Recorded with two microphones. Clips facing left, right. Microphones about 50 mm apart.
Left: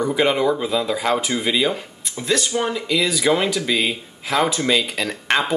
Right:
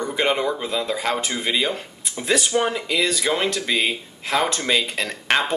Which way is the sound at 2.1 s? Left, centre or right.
Centre.